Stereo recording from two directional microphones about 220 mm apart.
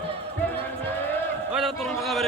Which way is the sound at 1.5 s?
Centre (ahead or behind).